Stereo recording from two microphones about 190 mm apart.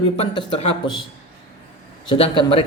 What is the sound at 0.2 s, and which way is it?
Speech, 30° left (ahead or behind).